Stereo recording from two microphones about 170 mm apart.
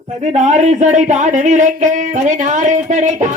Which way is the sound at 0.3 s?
45° right (ahead or behind).